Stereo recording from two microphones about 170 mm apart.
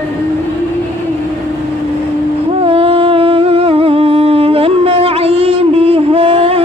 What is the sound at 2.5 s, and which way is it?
Humming, 35° right (ahead or behind).